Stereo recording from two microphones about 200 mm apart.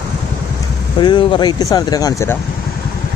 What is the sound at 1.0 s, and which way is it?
Speech, 25° left (ahead or behind).